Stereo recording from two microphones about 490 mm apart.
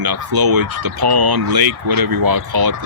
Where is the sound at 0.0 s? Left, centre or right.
Right.